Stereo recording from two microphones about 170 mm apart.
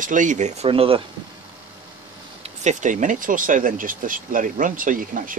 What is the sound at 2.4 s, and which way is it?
Speech, 45° right (ahead or behind).